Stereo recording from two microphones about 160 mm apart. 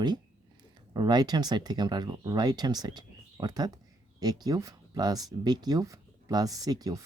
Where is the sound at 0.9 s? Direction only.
25° right (ahead or behind).